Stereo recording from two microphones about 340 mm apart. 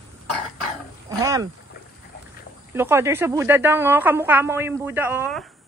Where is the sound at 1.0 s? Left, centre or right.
Centre.